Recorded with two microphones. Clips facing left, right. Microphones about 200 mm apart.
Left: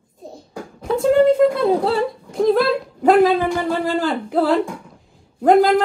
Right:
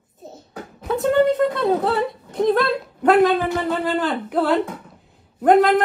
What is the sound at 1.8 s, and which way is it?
Speech, 25° left (ahead or behind).